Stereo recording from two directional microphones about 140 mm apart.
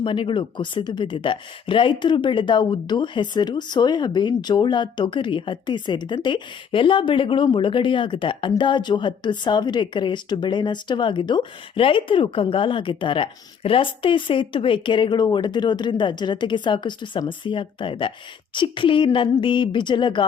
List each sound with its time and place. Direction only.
0.0 s speech: 35° left (ahead or behind)